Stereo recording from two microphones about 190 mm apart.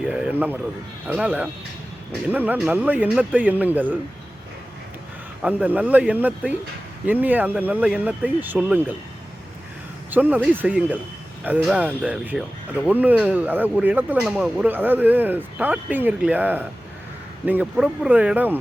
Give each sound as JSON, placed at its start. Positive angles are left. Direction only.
{"t": 0.0, "sound": "a man's voice", "side_deg": -5}
{"t": 5.4, "sound": "speech", "side_deg": -10}
{"t": 10.1, "sound": "speech", "side_deg": -10}